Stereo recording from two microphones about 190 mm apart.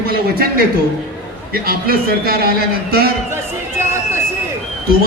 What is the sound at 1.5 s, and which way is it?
A man's voice, 55° right (ahead or behind).